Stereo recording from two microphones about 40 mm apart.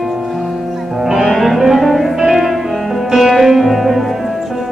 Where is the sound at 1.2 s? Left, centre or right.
Centre.